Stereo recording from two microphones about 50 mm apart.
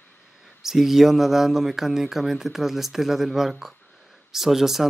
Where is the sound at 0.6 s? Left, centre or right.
Centre.